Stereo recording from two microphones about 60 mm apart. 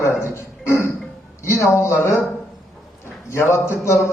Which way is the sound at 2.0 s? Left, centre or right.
Left.